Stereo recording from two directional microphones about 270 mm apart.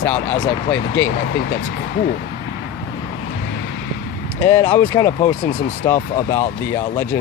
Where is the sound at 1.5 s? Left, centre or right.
Left.